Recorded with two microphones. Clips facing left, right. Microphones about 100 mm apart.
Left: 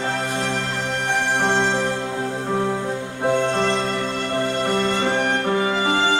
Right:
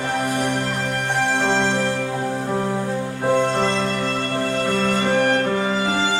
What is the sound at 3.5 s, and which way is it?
Music, 15° left (ahead or behind).